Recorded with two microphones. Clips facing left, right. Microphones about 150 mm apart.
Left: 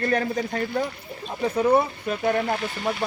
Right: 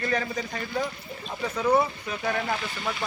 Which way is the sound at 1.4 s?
30° left (ahead or behind).